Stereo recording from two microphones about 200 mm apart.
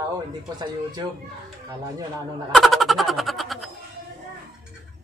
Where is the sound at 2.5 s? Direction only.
Centre (ahead or behind).